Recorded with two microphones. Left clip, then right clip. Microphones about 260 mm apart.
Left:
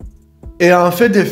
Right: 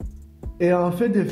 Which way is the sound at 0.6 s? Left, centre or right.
Centre.